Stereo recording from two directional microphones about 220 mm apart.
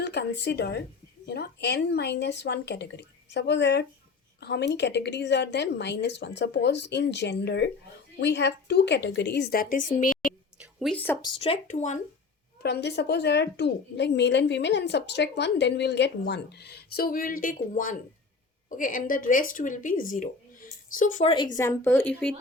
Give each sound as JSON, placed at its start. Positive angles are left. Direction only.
{"t": 0.0, "sound": "a woman's voice", "side_deg": 50}
{"t": 10.6, "sound": "a sound", "side_deg": 0}
{"t": 11.2, "sound": "speech", "side_deg": 25}
{"t": 12.6, "sound": "a woman's voice", "side_deg": 50}